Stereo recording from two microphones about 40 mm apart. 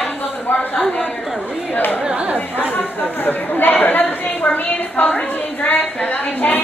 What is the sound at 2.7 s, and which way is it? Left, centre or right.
A woman's voice, left.